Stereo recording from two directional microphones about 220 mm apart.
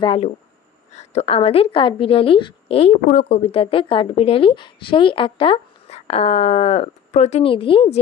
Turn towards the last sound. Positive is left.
turn(degrees=25)  # may be behind; listen again after turning